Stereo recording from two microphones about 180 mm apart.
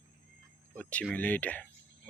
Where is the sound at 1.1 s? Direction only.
10° left (ahead or behind).